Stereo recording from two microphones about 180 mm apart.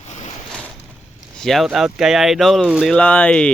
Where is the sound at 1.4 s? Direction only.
Centre (ahead or behind).